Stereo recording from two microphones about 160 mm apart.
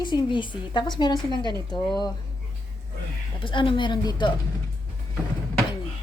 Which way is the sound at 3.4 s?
30° left (ahead or behind).